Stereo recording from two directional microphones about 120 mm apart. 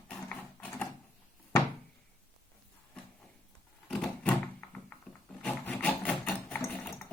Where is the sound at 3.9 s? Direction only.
10° left (ahead or behind).